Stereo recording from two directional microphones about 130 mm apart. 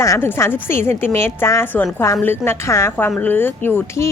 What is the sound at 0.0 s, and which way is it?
A woman's voice, 20° left (ahead or behind).